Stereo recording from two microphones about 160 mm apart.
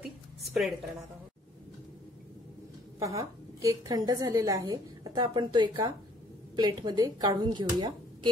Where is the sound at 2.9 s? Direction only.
20° right (ahead or behind).